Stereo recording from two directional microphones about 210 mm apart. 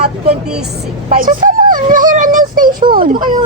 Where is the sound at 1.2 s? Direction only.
40° right (ahead or behind).